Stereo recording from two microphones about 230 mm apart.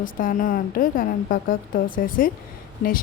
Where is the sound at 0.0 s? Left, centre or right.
Left.